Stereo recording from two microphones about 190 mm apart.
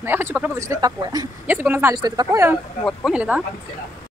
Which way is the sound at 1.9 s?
20° right (ahead or behind).